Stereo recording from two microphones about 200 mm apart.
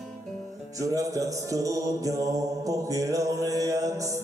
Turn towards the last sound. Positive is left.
turn(degrees=-15)  # may be behind; listen again after turning